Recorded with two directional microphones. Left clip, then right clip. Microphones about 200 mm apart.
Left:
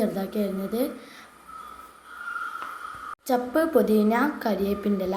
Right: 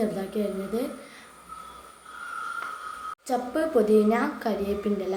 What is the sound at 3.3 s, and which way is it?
A woman's voice, 20° left (ahead or behind).